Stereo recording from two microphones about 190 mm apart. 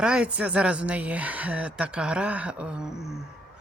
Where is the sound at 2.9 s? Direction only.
15° left (ahead or behind).